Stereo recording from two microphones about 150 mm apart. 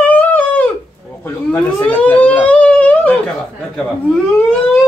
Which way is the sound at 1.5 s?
10° left (ahead or behind).